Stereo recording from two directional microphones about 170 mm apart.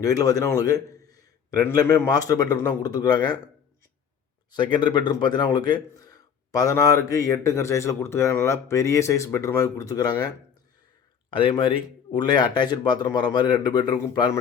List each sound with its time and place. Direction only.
0.0 s a man's voice: 20° left (ahead or behind)
4.5 s a man's voice: 25° left (ahead or behind)